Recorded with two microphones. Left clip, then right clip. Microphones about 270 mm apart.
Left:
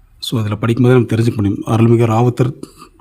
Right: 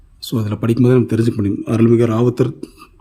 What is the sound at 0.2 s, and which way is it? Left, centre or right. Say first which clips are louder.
A man's voice: left 2 dB; centre.